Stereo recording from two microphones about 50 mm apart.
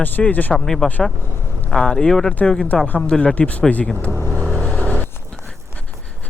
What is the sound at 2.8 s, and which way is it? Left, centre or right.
Speech, left.